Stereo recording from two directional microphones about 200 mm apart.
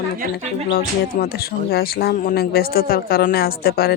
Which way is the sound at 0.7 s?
50° left (ahead or behind).